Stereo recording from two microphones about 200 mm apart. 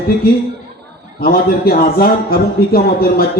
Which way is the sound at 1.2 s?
50° left (ahead or behind).